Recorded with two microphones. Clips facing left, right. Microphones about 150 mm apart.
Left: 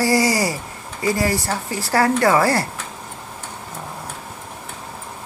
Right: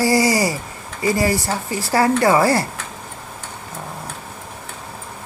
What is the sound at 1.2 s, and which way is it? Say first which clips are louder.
Speech: right 2 dB; 20° right (ahead or behind).